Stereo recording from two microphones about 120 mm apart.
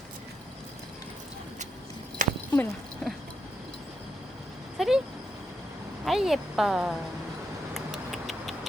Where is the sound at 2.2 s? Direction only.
90° right.